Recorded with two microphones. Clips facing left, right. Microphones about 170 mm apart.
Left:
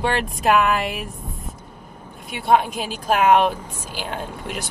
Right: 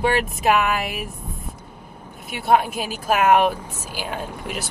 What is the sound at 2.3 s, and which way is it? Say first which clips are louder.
Speech: even; 10° right (ahead or behind).